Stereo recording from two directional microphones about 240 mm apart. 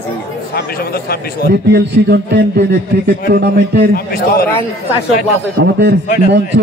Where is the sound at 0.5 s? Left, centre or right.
Left.